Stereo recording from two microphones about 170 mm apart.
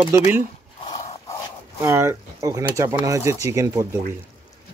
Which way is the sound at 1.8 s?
15° right (ahead or behind).